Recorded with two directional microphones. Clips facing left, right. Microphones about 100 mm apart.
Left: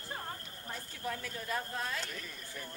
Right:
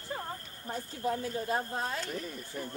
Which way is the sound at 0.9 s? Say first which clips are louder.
Right 8 dB; 35° right (ahead or behind).